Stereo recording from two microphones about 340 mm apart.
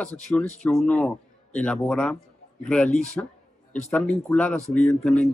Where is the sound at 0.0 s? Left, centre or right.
Centre.